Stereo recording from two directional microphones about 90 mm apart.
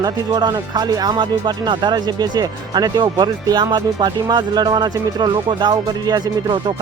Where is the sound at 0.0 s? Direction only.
50° right (ahead or behind).